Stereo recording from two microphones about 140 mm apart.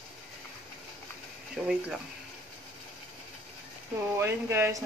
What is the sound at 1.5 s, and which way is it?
Speech, 5° right (ahead or behind).